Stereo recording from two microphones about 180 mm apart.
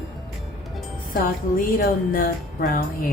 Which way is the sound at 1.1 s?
50° left (ahead or behind).